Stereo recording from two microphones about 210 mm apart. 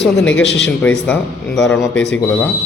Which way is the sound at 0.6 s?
5° left (ahead or behind).